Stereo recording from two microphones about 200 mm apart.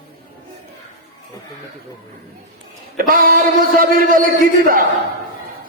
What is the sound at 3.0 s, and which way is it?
Music, 45° right (ahead or behind).